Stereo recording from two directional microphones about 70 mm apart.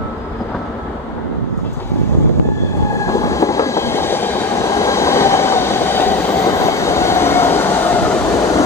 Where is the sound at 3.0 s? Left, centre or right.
Left.